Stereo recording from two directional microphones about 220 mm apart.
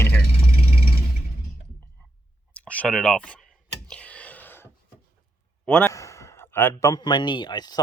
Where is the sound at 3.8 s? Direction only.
5° left (ahead or behind).